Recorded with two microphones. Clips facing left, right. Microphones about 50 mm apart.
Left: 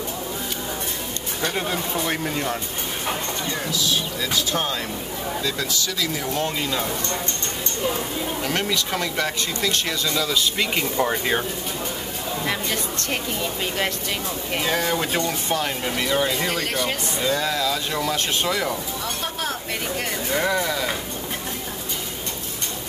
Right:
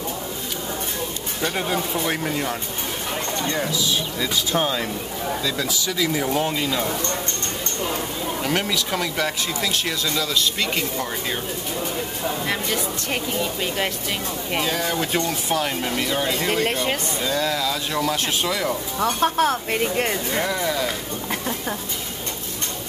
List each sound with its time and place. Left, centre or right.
1.4 s speech: centre
4.5 s speech: centre
6.6 s speech: centre
8.4 s speech: centre
11.1 s speech: left
13.1 s speech: centre
14.7 s speech: left
15.0 s speech: centre
16.0 s speech: centre
16.4 s speech: right
17.2 s speech: centre
18.9 s speech: right
20.6 s speech: centre